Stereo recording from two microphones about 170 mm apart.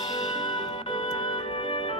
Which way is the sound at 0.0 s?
25° left (ahead or behind).